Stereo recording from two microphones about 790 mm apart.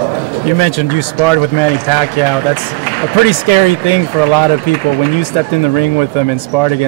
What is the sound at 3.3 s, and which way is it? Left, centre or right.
Speech, left.